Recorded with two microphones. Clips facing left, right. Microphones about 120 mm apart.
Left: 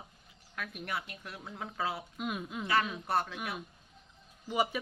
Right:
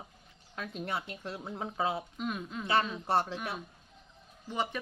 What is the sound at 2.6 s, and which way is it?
Speech, 25° right (ahead or behind).